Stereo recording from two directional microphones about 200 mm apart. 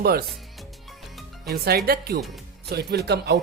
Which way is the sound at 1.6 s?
50° right (ahead or behind).